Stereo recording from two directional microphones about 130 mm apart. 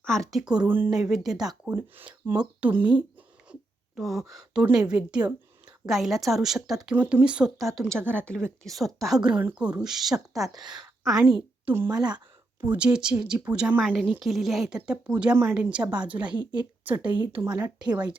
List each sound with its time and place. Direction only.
0.0 s a woman's voice: 5° left (ahead or behind)
1.7 s a woman's voice: 15° right (ahead or behind)
3.5 s a sound: 10° right (ahead or behind)
3.9 s a woman's voice: centre (ahead or behind)
6.9 s a woman's voice: 15° right (ahead or behind)
7.8 s a woman's voice: 5° left (ahead or behind)
10.7 s a sound: centre (ahead or behind)
11.6 s speech: 15° right (ahead or behind)
12.0 s a sound: 35° right (ahead or behind)
12.6 s a woman's voice: 10° right (ahead or behind)